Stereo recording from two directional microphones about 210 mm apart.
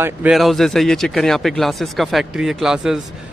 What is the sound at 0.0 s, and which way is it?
Speech, 5° right (ahead or behind).